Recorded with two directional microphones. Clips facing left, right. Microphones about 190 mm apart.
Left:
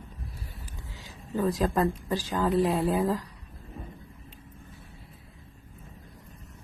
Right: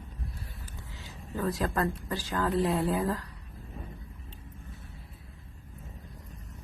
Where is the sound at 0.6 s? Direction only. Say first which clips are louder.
Left 1 dB; 15° left (ahead or behind).